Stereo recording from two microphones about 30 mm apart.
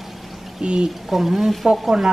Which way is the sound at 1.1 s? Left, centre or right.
Centre.